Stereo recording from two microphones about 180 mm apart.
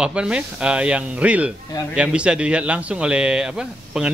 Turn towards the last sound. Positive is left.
turn(degrees=-5)  # may be behind; listen again after turning